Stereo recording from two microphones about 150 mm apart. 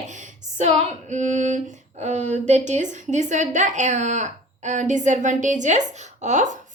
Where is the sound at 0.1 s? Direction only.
55° right (ahead or behind).